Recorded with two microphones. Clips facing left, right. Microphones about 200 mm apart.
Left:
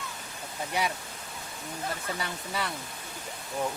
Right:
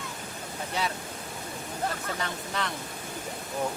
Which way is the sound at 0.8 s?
15° left (ahead or behind).